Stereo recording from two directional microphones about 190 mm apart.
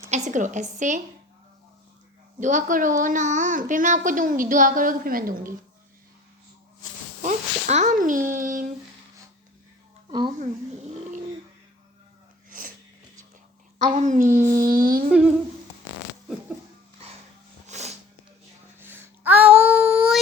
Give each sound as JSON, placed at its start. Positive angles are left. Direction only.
{"t": 0.3, "sound": "speech", "side_deg": -40}
{"t": 2.4, "sound": "speech", "side_deg": -45}
{"t": 7.2, "sound": "speech", "side_deg": -40}
{"t": 10.1, "sound": "a woman's voice", "side_deg": -25}
{"t": 12.5, "sound": "sneeze", "side_deg": -45}
{"t": 13.7, "sound": "speech", "side_deg": -40}
{"t": 17.7, "sound": "snort", "side_deg": -35}
{"t": 18.8, "sound": "babbling", "side_deg": -10}
{"t": 19.7, "sound": "child singing", "side_deg": -5}